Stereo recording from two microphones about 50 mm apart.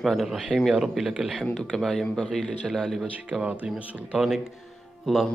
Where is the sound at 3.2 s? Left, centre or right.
Right.